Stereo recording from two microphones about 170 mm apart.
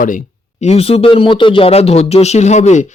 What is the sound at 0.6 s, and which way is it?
Speech, 35° left (ahead or behind).